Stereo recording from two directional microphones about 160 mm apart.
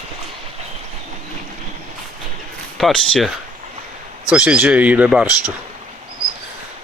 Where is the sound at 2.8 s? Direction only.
5° left (ahead or behind).